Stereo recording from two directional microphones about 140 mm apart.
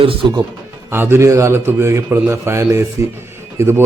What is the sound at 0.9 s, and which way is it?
A man's voice, 15° right (ahead or behind).